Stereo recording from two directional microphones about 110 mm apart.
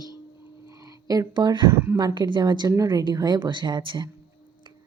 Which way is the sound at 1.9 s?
40° right (ahead or behind).